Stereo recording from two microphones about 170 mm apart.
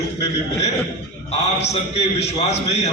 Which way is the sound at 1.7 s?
40° left (ahead or behind).